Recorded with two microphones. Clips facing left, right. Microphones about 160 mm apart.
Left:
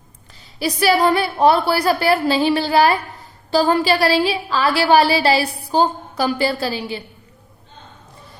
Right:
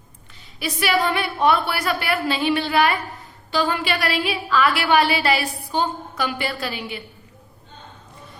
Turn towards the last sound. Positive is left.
turn(degrees=30)  # may be behind; listen again after turning